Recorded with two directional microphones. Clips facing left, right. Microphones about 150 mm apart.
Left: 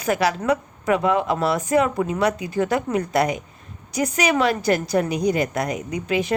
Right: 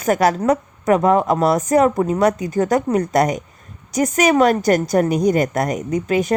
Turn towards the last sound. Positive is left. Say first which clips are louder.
# right 5 dB
turn(degrees=-45)  # may be behind; listen again after turning